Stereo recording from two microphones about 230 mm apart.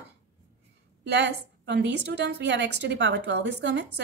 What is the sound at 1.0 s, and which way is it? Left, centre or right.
A woman's voice, right.